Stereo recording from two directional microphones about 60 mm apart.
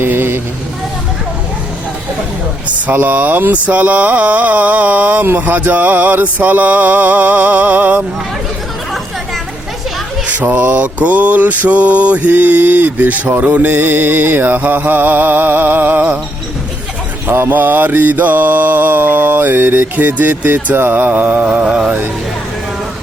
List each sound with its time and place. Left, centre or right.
0.0 s vehicle: right
2.6 s mantra: right
10.2 s mantra: right
17.2 s mantra: right